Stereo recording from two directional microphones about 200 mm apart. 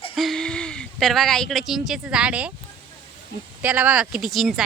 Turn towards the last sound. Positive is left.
turn(degrees=0)  # may be behind; listen again after turning